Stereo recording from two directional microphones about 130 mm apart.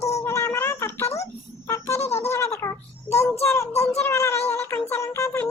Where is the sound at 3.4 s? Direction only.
20° left (ahead or behind).